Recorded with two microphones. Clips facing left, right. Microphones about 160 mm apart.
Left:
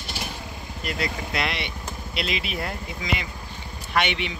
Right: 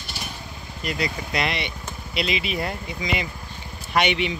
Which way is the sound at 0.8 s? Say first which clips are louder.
Right 2 dB; centre (ahead or behind).